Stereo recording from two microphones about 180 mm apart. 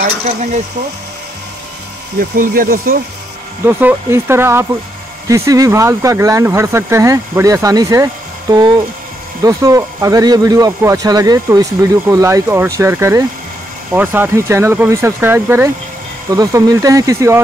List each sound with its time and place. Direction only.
2.1 s speech: 50° right (ahead or behind)
3.6 s speech: 15° right (ahead or behind)